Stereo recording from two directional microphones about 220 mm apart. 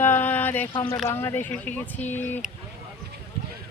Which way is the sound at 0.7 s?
20° left (ahead or behind).